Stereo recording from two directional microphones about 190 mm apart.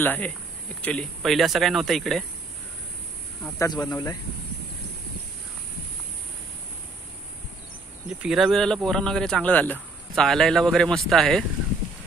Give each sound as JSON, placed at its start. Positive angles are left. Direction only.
{"t": 0.0, "sound": "speech", "side_deg": 10}
{"t": 3.5, "sound": "speech", "side_deg": 20}
{"t": 8.2, "sound": "speech", "side_deg": 0}